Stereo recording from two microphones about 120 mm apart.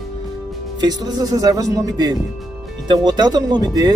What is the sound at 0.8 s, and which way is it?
Speech, 35° right (ahead or behind).